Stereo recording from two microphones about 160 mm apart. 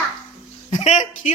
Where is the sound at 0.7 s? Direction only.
45° left (ahead or behind).